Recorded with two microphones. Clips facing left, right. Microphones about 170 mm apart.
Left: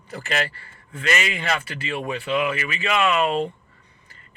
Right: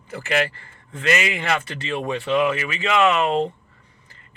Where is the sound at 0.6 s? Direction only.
20° right (ahead or behind).